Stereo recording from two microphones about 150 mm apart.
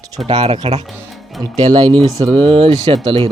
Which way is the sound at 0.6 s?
45° right (ahead or behind).